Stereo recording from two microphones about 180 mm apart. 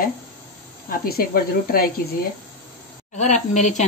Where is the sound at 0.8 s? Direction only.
55° left (ahead or behind).